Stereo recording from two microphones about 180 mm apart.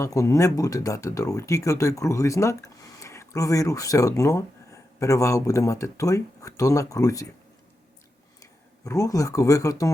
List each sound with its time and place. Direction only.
0.0 s speech: 15° left (ahead or behind)
8.4 s speech: 20° left (ahead or behind)